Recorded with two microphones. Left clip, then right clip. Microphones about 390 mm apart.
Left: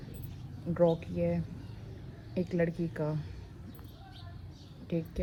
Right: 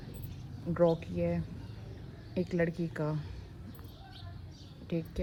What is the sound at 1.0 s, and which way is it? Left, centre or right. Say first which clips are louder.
Speech: left 1 dB; right.